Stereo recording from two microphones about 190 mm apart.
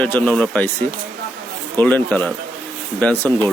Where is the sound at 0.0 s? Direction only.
5° left (ahead or behind).